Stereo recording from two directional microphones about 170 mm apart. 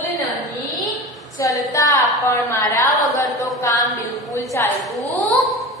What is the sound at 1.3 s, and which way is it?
A woman's voice, 20° left (ahead or behind).